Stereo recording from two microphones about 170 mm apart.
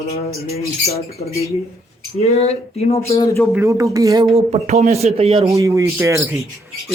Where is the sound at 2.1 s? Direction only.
40° left (ahead or behind).